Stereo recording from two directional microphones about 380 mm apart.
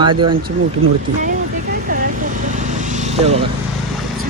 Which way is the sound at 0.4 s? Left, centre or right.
Right.